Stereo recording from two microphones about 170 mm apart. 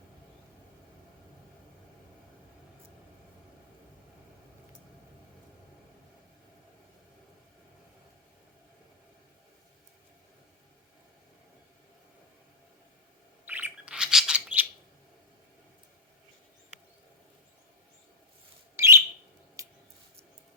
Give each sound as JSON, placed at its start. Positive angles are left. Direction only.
{"t": 13.5, "sound": "bird", "side_deg": -10}
{"t": 18.8, "sound": "a sound", "side_deg": -15}
{"t": 19.6, "sound": "scissors", "side_deg": -20}